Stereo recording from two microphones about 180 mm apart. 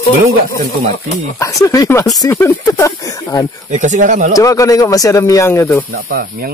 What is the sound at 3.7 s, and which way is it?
Speech, 45° right (ahead or behind).